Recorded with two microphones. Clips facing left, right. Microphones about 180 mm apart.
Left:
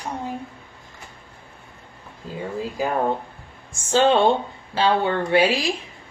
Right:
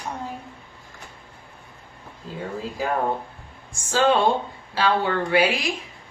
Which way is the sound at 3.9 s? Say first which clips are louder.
Left 2 dB; 25° left (ahead or behind).